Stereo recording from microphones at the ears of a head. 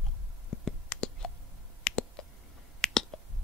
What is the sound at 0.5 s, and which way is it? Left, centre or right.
Whispering, left.